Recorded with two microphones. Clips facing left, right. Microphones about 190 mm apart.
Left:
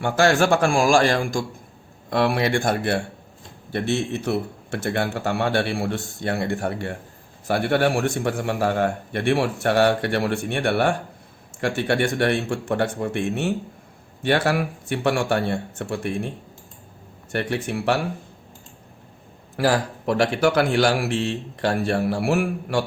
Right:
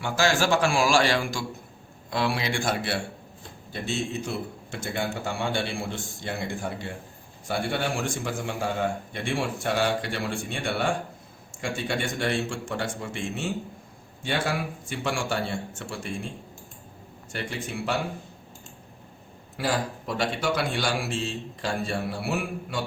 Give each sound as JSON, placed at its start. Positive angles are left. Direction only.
{"t": 0.0, "sound": "a man's voice", "side_deg": 55}
{"t": 3.7, "sound": "a man's voice", "side_deg": 65}
{"t": 17.3, "sound": "a man's voice", "side_deg": 65}
{"t": 19.5, "sound": "a man's voice", "side_deg": 75}